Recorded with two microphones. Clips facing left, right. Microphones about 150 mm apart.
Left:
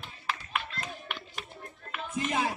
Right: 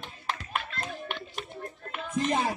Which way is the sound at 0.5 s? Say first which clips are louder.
Right 1 dB; 50° right (ahead or behind).